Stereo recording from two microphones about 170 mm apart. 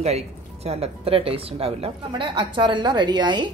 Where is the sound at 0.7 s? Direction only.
35° right (ahead or behind).